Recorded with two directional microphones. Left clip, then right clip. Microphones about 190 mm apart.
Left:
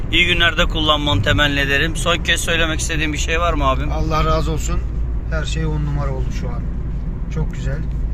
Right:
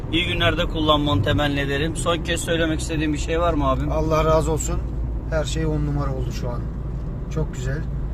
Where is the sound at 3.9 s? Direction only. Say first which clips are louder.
Right 1 dB; 55° right (ahead or behind).